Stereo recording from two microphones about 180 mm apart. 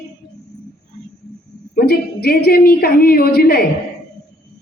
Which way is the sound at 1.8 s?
60° left (ahead or behind).